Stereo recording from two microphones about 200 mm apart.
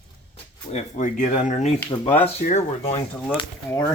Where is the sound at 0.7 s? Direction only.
40° left (ahead or behind).